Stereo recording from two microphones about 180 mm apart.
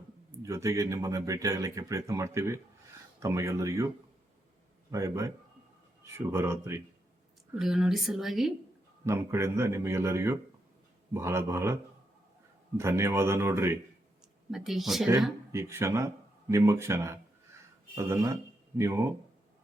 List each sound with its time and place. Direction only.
0.4 s speech: 15° right (ahead or behind)
4.9 s speech: 15° right (ahead or behind)
7.5 s speech: 5° right (ahead or behind)
9.0 s speech: 15° right (ahead or behind)
14.5 s speech: centre (ahead or behind)
15.5 s speech: 15° right (ahead or behind)